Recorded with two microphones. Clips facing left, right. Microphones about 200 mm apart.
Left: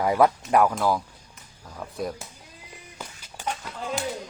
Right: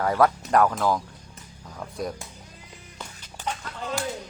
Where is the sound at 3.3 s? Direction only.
10° left (ahead or behind).